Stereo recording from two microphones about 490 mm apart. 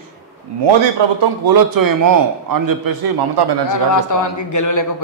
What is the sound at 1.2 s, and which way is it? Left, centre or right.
A man's voice, right.